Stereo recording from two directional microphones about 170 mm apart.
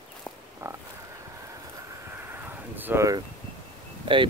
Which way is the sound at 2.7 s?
15° right (ahead or behind).